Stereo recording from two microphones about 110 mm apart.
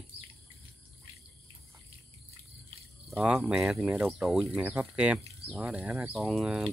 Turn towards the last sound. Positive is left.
turn(degrees=-5)  # may be behind; listen again after turning